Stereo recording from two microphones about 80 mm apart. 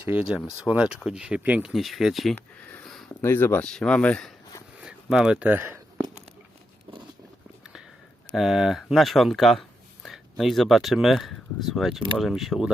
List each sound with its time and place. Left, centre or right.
0.0 s speech: right
0.3 s speech: centre
1.7 s speech: centre
2.3 s speech: left
2.8 s a sound: centre
3.2 s speech: left
3.6 s speech: centre
4.8 s a sound: centre
5.5 s speech: right
7.6 s a sound: centre
8.3 s speech: centre